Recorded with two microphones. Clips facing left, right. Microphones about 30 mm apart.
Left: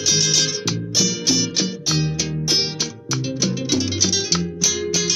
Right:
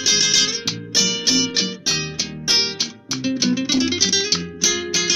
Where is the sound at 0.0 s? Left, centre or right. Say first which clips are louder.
Right 1 dB; right.